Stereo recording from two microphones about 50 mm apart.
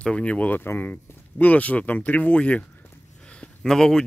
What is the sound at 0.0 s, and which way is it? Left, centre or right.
Speech, left.